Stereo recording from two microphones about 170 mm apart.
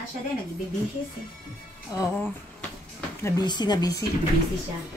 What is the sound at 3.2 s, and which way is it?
Speech, 25° left (ahead or behind).